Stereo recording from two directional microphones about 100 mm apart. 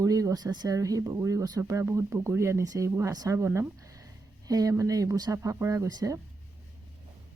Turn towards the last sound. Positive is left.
turn(degrees=-40)  # may be behind; listen again after turning